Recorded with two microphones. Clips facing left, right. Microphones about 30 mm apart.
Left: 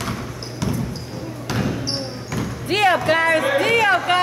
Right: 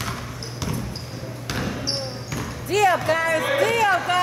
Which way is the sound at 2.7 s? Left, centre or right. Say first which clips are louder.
Left 2 dB; left.